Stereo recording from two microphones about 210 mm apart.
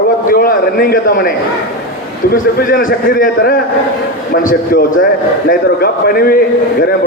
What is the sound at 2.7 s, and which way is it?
A man's voice, 40° left (ahead or behind).